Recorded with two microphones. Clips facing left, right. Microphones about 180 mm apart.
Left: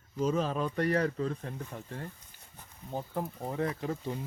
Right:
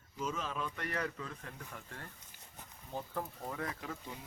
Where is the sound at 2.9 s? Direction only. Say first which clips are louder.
Left 5 dB; 15° left (ahead or behind).